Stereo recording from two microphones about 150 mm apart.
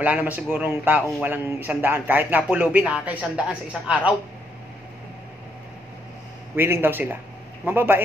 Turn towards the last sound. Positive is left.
turn(degrees=-15)  # may be behind; listen again after turning